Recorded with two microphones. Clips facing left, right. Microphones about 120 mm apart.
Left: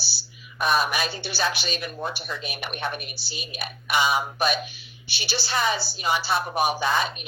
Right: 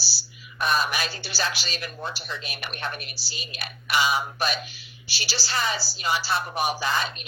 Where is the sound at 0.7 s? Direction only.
20° left (ahead or behind).